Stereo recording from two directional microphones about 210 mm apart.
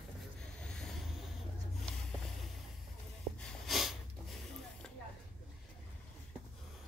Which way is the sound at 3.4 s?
Centre (ahead or behind).